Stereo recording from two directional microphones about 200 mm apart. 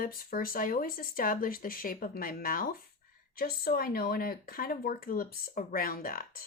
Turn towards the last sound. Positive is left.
turn(degrees=45)  # may be behind; listen again after turning